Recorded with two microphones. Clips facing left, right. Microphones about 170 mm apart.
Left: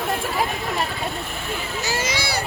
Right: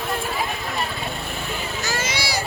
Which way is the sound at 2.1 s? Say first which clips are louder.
Left 1 dB; 55° left (ahead or behind).